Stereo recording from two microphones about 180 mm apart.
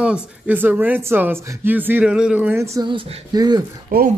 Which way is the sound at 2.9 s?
25° right (ahead or behind).